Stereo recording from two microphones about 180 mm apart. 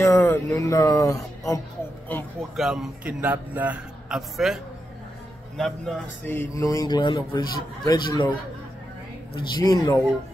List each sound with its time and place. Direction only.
0.0 s music: 15° left (ahead or behind)
2.5 s a man's voice: centre (ahead or behind)
5.6 s a man's voice: 5° left (ahead or behind)
9.3 s a man's voice: 25° left (ahead or behind)